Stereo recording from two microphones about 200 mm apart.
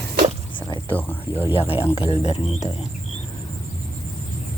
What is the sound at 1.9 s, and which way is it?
Speech, 30° left (ahead or behind).